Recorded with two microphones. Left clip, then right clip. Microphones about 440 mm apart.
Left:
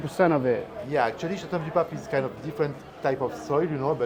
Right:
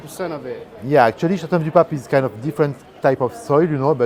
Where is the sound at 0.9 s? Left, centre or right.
Right.